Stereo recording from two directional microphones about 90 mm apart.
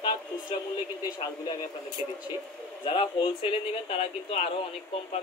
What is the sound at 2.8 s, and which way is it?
Speech, 70° left (ahead or behind).